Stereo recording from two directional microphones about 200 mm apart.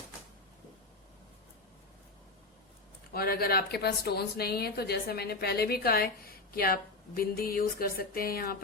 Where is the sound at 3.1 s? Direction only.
50° left (ahead or behind).